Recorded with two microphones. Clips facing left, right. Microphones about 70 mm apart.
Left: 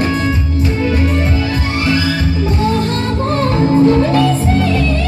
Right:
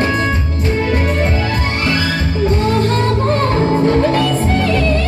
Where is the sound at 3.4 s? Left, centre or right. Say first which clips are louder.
Left 6 dB; right.